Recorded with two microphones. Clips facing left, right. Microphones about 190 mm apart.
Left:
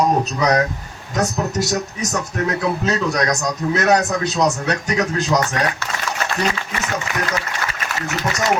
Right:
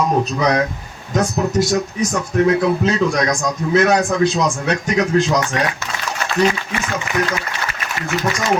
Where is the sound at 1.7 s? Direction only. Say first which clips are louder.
Right 4 dB; 40° left (ahead or behind).